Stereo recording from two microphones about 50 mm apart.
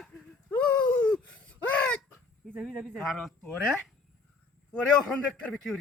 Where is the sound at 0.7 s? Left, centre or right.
Left.